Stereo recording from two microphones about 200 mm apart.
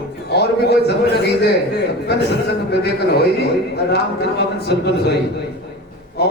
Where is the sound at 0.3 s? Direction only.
55° left (ahead or behind).